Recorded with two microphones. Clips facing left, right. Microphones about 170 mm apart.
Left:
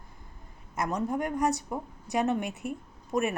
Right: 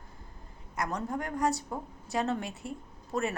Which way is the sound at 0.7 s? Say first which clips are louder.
Left 4 dB; 20° left (ahead or behind).